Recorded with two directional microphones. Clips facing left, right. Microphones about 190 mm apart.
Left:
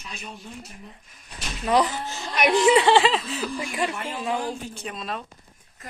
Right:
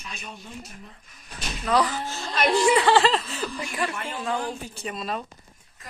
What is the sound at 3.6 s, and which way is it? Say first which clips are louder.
Speech: left 2 dB; 20° left (ahead or behind).